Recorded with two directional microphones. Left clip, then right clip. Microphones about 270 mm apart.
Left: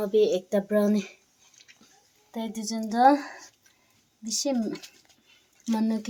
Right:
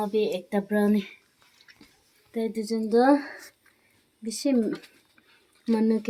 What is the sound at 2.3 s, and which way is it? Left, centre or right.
Speech, left.